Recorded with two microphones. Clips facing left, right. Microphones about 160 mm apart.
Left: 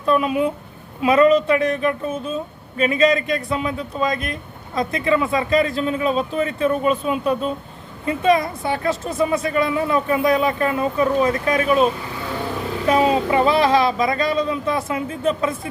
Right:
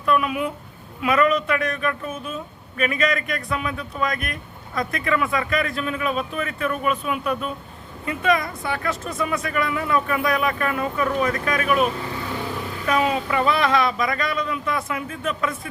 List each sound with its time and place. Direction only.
0.0 s speech: 30° left (ahead or behind)